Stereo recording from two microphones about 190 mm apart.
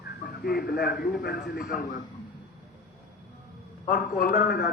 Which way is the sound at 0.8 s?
55° left (ahead or behind).